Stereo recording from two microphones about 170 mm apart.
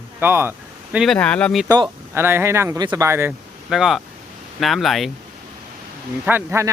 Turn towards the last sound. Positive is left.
turn(degrees=-15)  # may be behind; listen again after turning